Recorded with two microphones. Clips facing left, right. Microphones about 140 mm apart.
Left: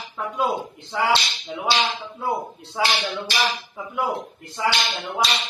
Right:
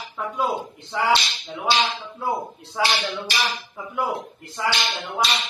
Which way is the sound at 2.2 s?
Centre (ahead or behind).